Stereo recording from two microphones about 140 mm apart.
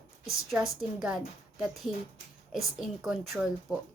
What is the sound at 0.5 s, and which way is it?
Speech, 5° right (ahead or behind).